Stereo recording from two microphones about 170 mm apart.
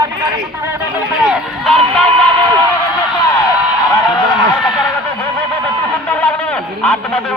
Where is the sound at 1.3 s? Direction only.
Centre (ahead or behind).